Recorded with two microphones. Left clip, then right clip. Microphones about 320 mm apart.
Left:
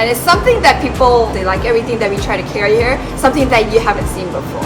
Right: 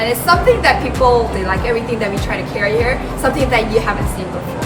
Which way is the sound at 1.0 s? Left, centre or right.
Left.